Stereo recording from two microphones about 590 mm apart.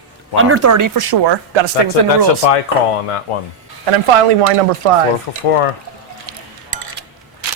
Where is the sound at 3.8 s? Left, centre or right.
Right.